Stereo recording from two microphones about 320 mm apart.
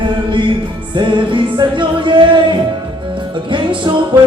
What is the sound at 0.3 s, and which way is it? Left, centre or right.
Music, centre.